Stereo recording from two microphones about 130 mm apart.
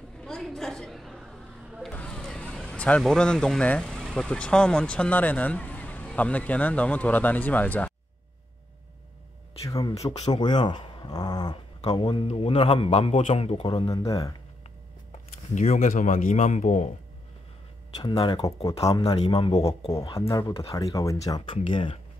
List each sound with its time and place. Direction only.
0.2 s a sound: 5° left (ahead or behind)
9.7 s speech: 30° left (ahead or behind)
11.8 s a man's voice: 45° left (ahead or behind)
13.8 s speech: 30° left (ahead or behind)
15.5 s a man's voice: 65° left (ahead or behind)
18.0 s speech: 40° left (ahead or behind)
18.4 s speech: 25° left (ahead or behind)
19.1 s a man's voice: 45° left (ahead or behind)
20.2 s speech: 25° left (ahead or behind)
21.6 s speech: 40° left (ahead or behind)